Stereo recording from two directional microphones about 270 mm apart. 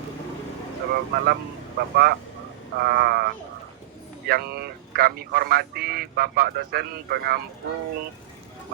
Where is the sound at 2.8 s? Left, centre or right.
Right.